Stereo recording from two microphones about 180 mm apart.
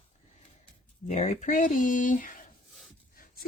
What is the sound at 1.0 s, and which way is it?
Speech, 40° left (ahead or behind).